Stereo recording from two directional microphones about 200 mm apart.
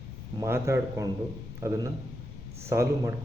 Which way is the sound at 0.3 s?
15° right (ahead or behind).